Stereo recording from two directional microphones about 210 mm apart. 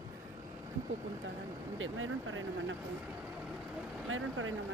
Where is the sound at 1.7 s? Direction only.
70° right (ahead or behind).